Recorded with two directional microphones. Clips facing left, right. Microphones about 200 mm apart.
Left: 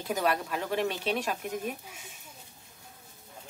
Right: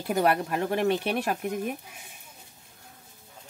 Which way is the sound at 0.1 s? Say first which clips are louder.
Right 5 dB; 60° right (ahead or behind).